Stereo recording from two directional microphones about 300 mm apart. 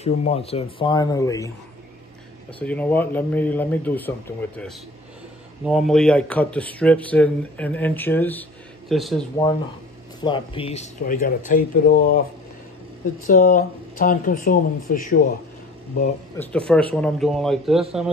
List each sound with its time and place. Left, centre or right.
0.0 s speech: left
2.6 s speech: centre
5.7 s speech: centre
10.2 s speech: centre
13.3 s speech: left
16.3 s speech: centre